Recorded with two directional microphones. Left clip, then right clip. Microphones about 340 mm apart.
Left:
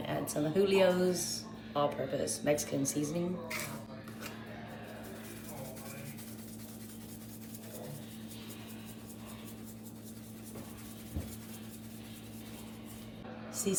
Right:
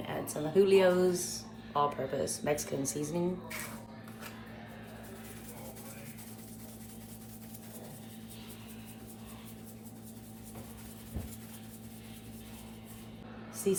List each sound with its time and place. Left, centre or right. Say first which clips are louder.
0.1 s speech: right 1 dB; centre
13.7 s speech: right 4 dB; centre